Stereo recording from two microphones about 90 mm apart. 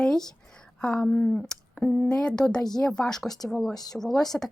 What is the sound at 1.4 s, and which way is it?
Speech, 10° left (ahead or behind).